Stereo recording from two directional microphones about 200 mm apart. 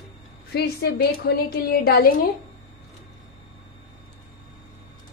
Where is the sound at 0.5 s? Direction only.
55° left (ahead or behind).